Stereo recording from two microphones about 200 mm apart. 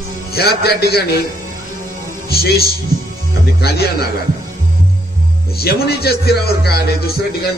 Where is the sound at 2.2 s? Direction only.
50° left (ahead or behind).